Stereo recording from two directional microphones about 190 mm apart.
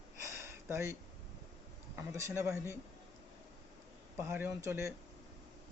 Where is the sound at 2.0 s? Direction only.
15° right (ahead or behind).